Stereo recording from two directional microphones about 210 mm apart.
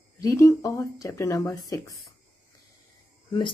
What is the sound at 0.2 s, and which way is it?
Speech, 15° left (ahead or behind).